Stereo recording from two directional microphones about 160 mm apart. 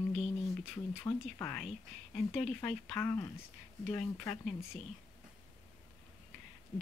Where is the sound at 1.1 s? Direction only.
15° left (ahead or behind).